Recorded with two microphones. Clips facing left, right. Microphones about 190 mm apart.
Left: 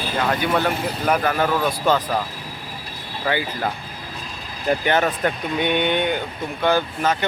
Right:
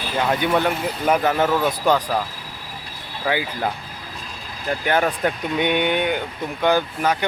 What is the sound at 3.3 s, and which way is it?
Speech, 10° right (ahead or behind).